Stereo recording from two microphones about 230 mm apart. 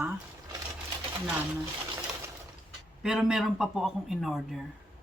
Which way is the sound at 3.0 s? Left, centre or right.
Centre.